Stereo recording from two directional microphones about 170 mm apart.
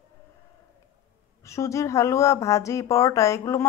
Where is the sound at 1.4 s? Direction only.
15° left (ahead or behind).